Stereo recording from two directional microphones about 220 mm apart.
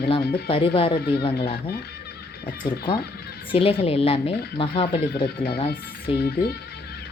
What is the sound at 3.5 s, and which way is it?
A woman's voice, 25° left (ahead or behind).